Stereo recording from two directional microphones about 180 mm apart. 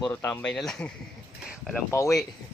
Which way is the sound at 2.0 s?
15° left (ahead or behind).